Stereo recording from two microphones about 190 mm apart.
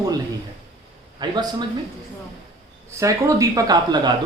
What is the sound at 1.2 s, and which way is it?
Speech, 20° right (ahead or behind).